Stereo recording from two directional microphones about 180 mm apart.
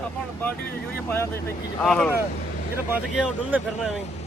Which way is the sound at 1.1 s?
15° left (ahead or behind).